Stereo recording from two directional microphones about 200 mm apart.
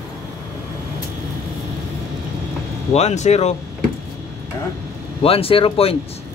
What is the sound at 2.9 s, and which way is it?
Speech, 35° left (ahead or behind).